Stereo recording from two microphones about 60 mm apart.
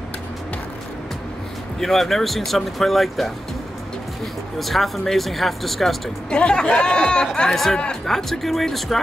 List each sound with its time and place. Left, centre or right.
1.8 s speech: centre
4.6 s speech: centre
6.3 s speech: centre
7.5 s speech: centre